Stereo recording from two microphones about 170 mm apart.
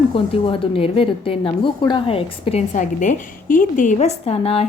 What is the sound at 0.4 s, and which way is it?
A woman's voice, 30° left (ahead or behind).